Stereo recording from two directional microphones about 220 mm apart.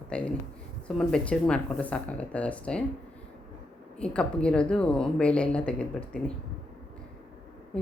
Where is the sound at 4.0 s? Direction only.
5° left (ahead or behind).